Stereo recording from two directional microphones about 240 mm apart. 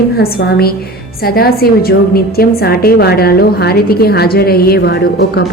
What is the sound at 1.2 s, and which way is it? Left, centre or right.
A woman's voice, left.